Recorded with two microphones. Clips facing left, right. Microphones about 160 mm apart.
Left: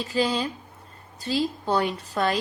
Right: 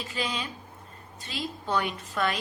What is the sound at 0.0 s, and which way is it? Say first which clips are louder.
A woman's voice: left 8 dB; 35° left (ahead or behind).